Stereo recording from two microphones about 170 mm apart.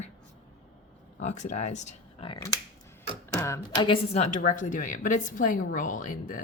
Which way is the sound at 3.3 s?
15° left (ahead or behind).